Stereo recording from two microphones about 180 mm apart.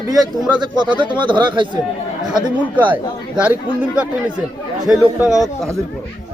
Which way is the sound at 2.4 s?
10° right (ahead or behind).